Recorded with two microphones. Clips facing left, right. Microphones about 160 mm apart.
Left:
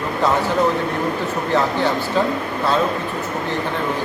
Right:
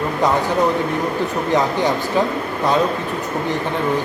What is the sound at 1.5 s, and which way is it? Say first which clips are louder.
Speech: right 1 dB; 15° right (ahead or behind).